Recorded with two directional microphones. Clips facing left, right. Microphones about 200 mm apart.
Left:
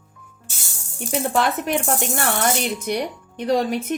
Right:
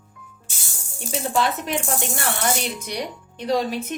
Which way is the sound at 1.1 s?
60° left (ahead or behind).